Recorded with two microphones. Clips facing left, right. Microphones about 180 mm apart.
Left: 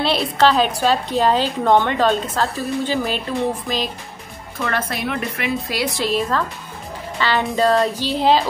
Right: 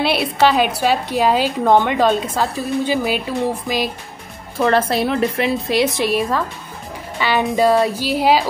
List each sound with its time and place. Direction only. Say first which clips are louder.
0.0 s a woman's voice: right 1 dB; 10° right (ahead or behind)
4.6 s a woman's voice: right 8 dB; 30° right (ahead or behind)
5.9 s a woman's voice: right 2 dB; 15° right (ahead or behind)